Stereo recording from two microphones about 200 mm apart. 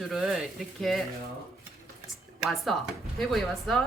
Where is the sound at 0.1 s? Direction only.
Centre (ahead or behind).